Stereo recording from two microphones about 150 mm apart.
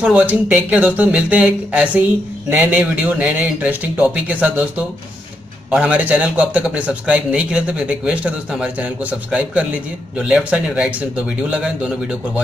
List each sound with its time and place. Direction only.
0.0 s a man's voice: 10° right (ahead or behind)